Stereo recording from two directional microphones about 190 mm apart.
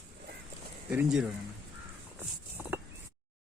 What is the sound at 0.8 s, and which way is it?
Speech, 5° right (ahead or behind).